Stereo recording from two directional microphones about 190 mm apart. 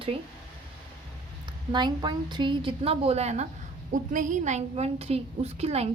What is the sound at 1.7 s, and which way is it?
A woman's voice, 25° right (ahead or behind).